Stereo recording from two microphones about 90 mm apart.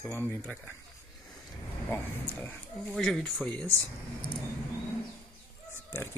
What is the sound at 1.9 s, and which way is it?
Speech, 25° left (ahead or behind).